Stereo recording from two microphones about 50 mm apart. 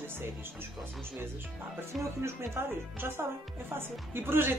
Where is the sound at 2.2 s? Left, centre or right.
Right.